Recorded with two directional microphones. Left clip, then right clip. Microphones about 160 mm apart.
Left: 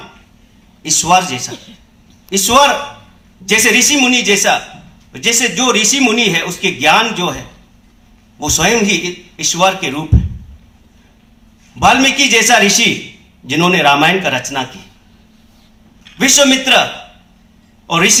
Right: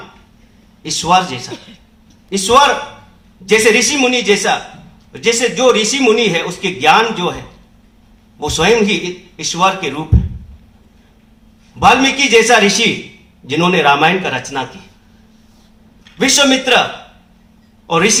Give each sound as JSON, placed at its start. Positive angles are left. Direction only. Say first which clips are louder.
{"t": 0.8, "sound": "a man's voice", "louder": "left 1 dB", "side_deg": 35}
{"t": 1.5, "sound": "a woman's voice", "louder": "even", "side_deg": 0}
{"t": 2.3, "sound": "speech", "louder": "even", "side_deg": 25}
{"t": 11.8, "sound": "speech", "louder": "even", "side_deg": 25}
{"t": 16.1, "sound": "speech", "louder": "left 1 dB", "side_deg": 30}
{"t": 17.8, "sound": "speech", "louder": "left 1 dB", "side_deg": 25}